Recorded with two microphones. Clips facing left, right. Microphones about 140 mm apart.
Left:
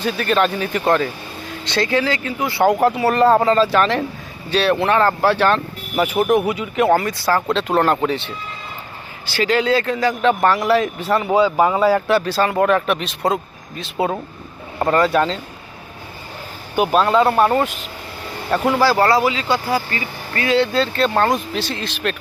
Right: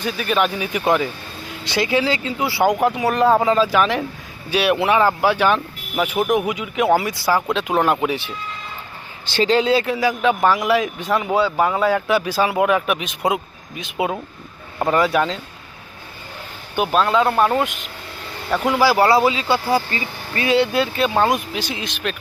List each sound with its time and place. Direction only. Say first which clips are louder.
0.0 s speech: left 2 dB; 5° right (ahead or behind)
1.7 s speech: even; 15° right (ahead or behind)
2.6 s speech: left 3 dB; centre (ahead or behind)
6.0 s speech: left 2 dB; 5° left (ahead or behind)
6.5 s speech: left 1 dB; 5° right (ahead or behind)
9.3 s speech: right 1 dB; 20° right (ahead or behind); by 15.4 s 5° right (ahead or behind)
16.7 s speech: left 2 dB; 10° left (ahead or behind)